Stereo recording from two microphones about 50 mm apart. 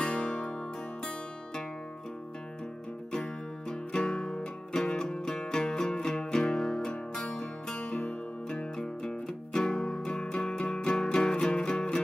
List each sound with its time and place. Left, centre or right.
0.0 s music: left
3.1 s music: centre